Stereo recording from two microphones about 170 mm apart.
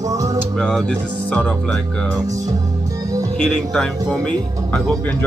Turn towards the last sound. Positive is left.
turn(degrees=10)  # may be behind; listen again after turning